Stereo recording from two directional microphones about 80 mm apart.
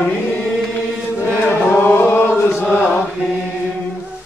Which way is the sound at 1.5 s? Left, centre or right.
Left.